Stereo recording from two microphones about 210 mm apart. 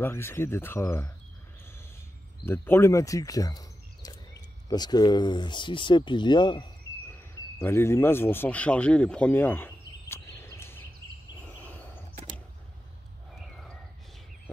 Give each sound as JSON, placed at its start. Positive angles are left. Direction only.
{"t": 0.0, "sound": "speech", "side_deg": 10}
{"t": 2.4, "sound": "a man's voice", "side_deg": 10}
{"t": 11.4, "sound": "a sound", "side_deg": 10}